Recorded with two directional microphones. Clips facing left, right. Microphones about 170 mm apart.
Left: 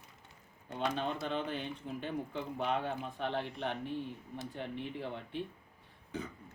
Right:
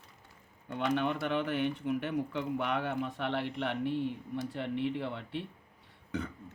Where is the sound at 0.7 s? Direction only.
70° right (ahead or behind).